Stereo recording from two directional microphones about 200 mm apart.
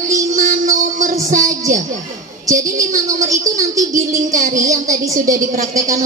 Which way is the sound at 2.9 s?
40° right (ahead or behind).